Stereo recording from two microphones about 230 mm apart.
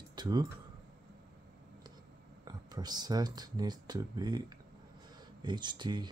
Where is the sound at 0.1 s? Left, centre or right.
Centre.